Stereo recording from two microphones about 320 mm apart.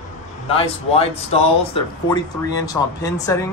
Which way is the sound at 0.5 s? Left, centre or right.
Centre.